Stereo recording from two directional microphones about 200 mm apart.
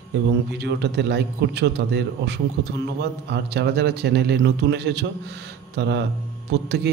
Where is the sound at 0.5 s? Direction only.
55° right (ahead or behind).